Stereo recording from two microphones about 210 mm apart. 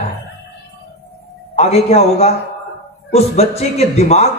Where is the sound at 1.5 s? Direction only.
30° left (ahead or behind).